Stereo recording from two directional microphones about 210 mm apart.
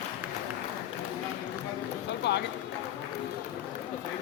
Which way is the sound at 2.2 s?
55° left (ahead or behind).